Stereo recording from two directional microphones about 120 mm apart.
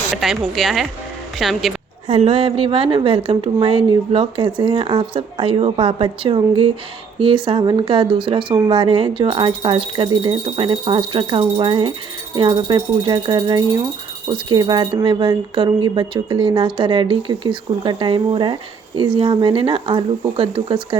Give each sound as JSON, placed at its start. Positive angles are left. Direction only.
{"t": 0.2, "sound": "a woman's voice", "side_deg": 0}
{"t": 2.0, "sound": "a woman's voice", "side_deg": -55}